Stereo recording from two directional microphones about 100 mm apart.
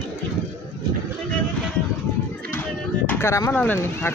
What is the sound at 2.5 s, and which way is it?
Music, 25° left (ahead or behind).